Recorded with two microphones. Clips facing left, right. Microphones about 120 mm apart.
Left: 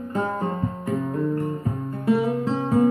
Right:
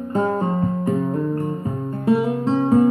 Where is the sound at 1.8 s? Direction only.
25° right (ahead or behind).